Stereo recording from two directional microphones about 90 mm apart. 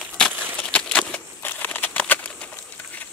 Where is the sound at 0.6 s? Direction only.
10° left (ahead or behind).